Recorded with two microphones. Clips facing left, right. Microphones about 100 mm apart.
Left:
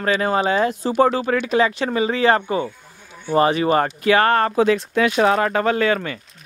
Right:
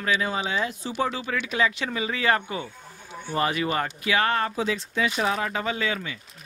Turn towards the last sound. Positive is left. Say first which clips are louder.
# left 9 dB
turn(degrees=60)  # may be behind; listen again after turning